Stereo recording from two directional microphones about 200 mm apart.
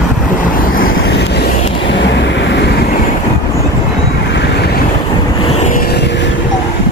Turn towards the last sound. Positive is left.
turn(degrees=35)  # may be behind; listen again after turning